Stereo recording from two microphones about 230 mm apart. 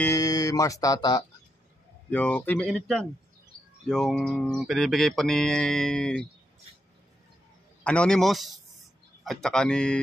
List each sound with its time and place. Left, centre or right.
0.0 s speech: centre
7.8 s speech: centre